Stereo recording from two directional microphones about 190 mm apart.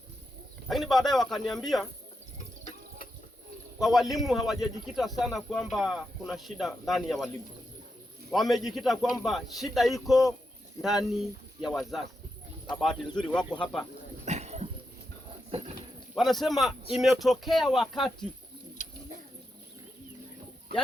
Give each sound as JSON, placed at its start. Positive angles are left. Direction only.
{"t": 0.7, "sound": "speech", "side_deg": 0}
{"t": 3.8, "sound": "speech", "side_deg": 0}
{"t": 8.3, "sound": "speech", "side_deg": 0}
{"t": 14.3, "sound": "a sound", "side_deg": -35}
{"t": 15.5, "sound": "dog", "side_deg": -30}
{"t": 16.1, "sound": "speech", "side_deg": 0}
{"t": 18.8, "sound": "bird", "side_deg": 45}